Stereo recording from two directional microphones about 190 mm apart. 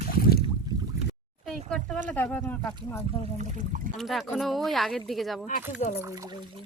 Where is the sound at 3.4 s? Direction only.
40° right (ahead or behind).